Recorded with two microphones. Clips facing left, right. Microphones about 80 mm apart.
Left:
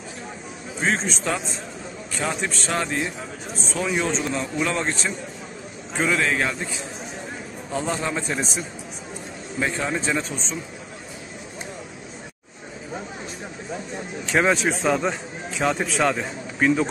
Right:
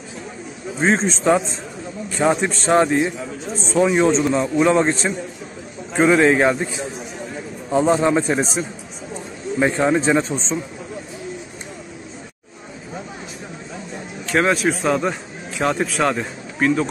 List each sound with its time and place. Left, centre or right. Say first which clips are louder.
0.7 s a man's voice: right 6 dB; right
7.7 s a man's voice: right 10 dB; right
14.2 s speech: right 3 dB; centre